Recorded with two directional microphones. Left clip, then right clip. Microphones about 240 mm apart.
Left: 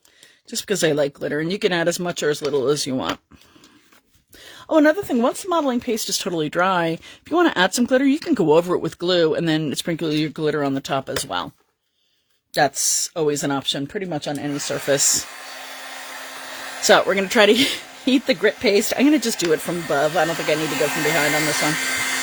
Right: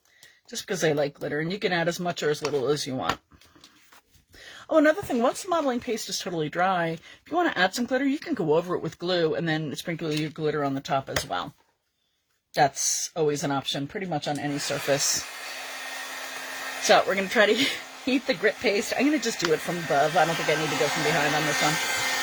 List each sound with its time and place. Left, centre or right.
0.4 s a woman's voice: left
4.4 s a woman's voice: left
12.5 s a woman's voice: left
15.4 s hair dryer: centre
16.9 s a woman's voice: left
20.6 s speech: left